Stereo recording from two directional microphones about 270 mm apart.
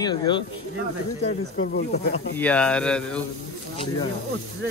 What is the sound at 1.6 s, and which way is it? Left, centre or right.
Speech, left.